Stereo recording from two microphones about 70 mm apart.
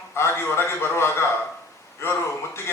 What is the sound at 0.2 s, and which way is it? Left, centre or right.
A man's voice, left.